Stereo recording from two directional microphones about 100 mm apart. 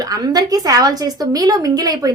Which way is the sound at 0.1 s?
40° right (ahead or behind).